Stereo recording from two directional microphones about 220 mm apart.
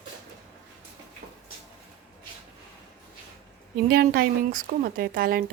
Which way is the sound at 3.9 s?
45° right (ahead or behind).